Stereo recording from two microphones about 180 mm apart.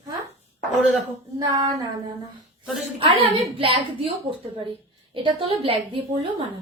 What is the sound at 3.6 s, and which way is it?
Speech, 30° right (ahead or behind).